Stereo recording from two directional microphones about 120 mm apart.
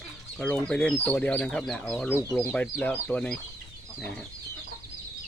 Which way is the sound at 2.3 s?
10° left (ahead or behind).